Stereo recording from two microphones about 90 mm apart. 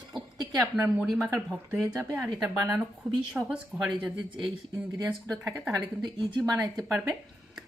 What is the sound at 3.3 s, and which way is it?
Speech, 10° right (ahead or behind).